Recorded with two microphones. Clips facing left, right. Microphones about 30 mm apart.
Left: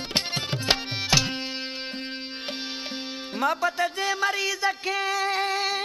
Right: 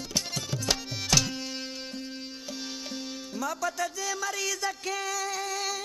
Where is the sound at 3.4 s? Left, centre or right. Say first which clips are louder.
Left 7 dB; left.